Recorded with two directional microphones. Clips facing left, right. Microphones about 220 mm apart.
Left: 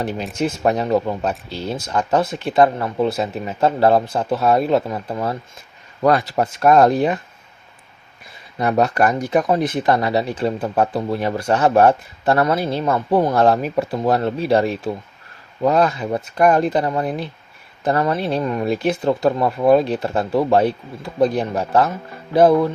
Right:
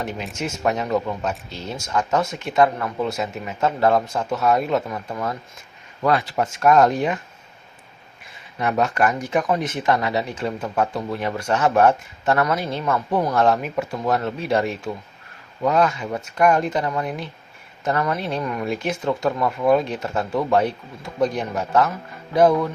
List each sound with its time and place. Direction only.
0.3 s speech: 35° left (ahead or behind)
8.5 s speech: 35° left (ahead or behind)